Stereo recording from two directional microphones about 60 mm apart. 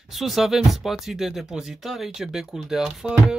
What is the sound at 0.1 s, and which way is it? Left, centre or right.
Speech, centre.